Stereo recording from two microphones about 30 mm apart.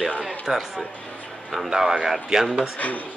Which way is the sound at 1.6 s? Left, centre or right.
Centre.